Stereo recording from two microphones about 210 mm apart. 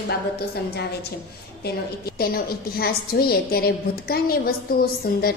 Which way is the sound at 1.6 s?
45° left (ahead or behind).